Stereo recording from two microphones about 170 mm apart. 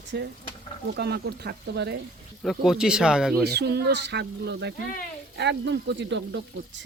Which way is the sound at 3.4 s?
75° right (ahead or behind).